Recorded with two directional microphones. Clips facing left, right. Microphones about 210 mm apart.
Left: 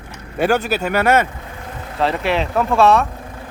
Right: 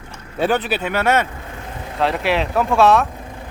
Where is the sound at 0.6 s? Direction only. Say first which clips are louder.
Left 2 dB; 45° left (ahead or behind).